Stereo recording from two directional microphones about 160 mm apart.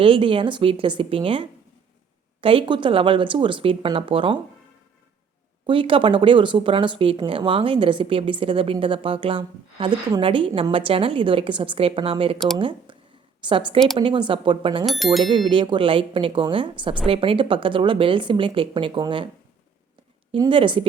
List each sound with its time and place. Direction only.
0.0 s speech: 35° right (ahead or behind)
5.6 s speech: 35° right (ahead or behind)
14.8 s speech: centre (ahead or behind)
15.2 s speech: 30° right (ahead or behind)
20.3 s speech: 30° right (ahead or behind)